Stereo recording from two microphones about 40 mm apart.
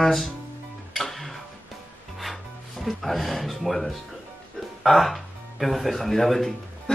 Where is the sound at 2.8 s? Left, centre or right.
Centre.